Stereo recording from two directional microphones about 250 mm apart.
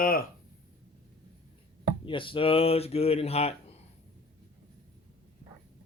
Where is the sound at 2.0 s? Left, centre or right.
Left.